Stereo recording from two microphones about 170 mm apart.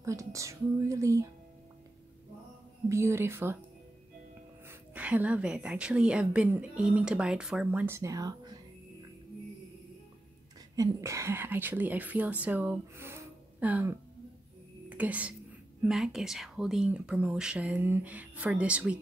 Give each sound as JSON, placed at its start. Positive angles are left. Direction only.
{"t": 0.0, "sound": "a woman's voice", "side_deg": -20}
{"t": 2.9, "sound": "a woman's voice", "side_deg": -15}
{"t": 4.6, "sound": "a woman's voice", "side_deg": -10}
{"t": 10.8, "sound": "a woman's voice", "side_deg": -20}